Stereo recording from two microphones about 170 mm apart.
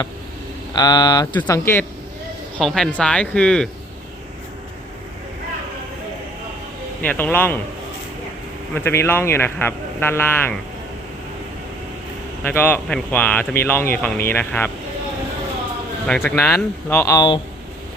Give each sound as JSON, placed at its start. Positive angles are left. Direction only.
{"t": 0.7, "sound": "speech", "side_deg": 25}
{"t": 2.6, "sound": "speech", "side_deg": 0}
{"t": 7.0, "sound": "speech", "side_deg": 10}
{"t": 8.7, "sound": "speech", "side_deg": 15}
{"t": 12.4, "sound": "speech", "side_deg": 10}
{"t": 16.0, "sound": "speech", "side_deg": 15}